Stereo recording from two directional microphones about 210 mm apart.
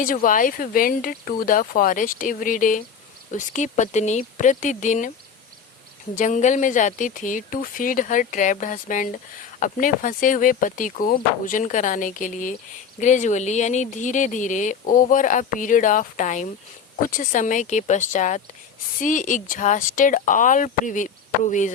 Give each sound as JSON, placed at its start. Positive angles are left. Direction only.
{"t": 0.0, "sound": "speech", "side_deg": 40}
{"t": 6.1, "sound": "speech", "side_deg": 35}